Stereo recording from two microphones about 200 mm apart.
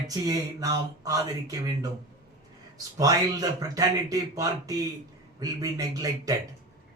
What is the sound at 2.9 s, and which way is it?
Speech, 20° right (ahead or behind).